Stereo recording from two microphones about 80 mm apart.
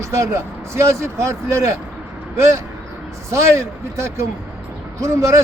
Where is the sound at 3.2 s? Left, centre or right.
Right.